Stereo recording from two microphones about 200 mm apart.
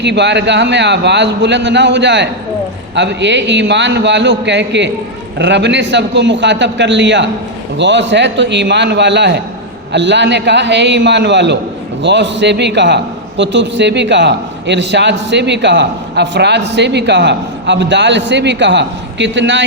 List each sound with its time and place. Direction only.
0.0 s a man's voice: 60° right (ahead or behind)